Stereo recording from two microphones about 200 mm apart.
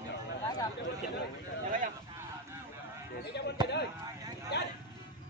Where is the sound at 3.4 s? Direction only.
55° left (ahead or behind).